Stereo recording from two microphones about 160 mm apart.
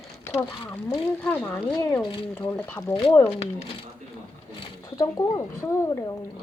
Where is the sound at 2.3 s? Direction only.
10° left (ahead or behind).